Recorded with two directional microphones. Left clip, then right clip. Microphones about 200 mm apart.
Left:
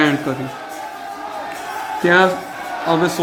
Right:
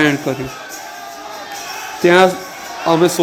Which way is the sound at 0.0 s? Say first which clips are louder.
Right 2 dB; 20° right (ahead or behind).